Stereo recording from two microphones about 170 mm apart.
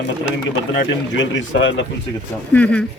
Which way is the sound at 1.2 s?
90° left.